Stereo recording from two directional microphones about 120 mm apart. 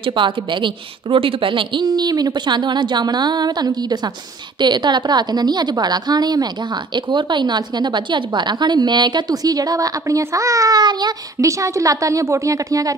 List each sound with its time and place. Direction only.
0.0 s a woman's voice: 40° right (ahead or behind)